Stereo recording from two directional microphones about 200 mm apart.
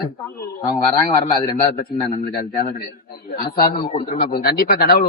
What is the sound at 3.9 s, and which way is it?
Speech, 45° left (ahead or behind).